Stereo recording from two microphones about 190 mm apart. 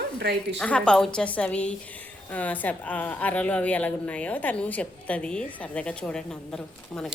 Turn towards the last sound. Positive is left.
turn(degrees=5)  # may be behind; listen again after turning